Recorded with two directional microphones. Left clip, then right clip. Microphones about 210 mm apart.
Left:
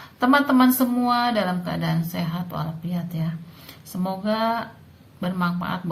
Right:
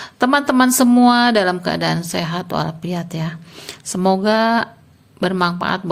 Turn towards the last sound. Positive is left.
turn(degrees=-50)  # may be behind; listen again after turning